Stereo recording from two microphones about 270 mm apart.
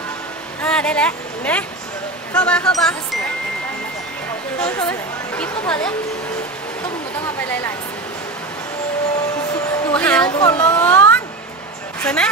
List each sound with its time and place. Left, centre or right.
0.6 s speech: centre
4.6 s speech: centre
9.9 s speech: centre
10.2 s speech: centre